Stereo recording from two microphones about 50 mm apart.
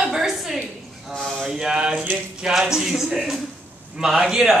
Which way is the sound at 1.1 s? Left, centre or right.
Centre.